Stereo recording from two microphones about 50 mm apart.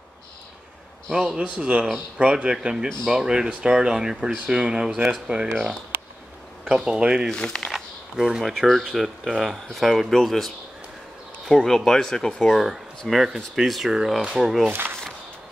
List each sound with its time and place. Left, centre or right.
1.1 s a man's voice: centre
5.3 s speech: right
5.9 s a sound: right
6.7 s speech: centre
7.2 s speech: centre
8.3 s speech: centre
13.1 s speech: centre
14.7 s speech: right